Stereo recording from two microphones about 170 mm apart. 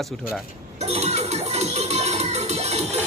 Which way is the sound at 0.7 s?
40° right (ahead or behind).